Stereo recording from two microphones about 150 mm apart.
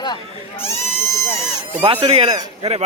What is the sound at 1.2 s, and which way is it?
Speech, 20° left (ahead or behind).